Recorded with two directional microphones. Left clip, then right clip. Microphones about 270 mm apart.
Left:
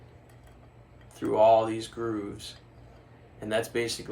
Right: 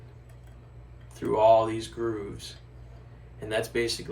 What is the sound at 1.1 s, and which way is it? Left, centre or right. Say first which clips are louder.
Speech: even; centre.